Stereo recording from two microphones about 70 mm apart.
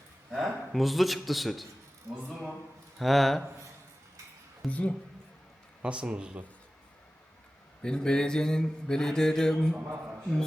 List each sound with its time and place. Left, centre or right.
0.3 s a man's voice: centre
3.0 s a man's voice: centre
4.6 s mantra: centre
5.8 s speech: centre
7.8 s mantra: centre
9.8 s a man's voice: right